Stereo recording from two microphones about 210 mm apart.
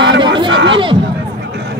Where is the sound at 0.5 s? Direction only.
60° right (ahead or behind).